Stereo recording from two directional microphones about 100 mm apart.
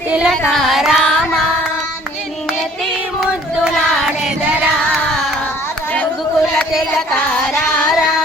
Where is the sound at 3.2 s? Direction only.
5° right (ahead or behind).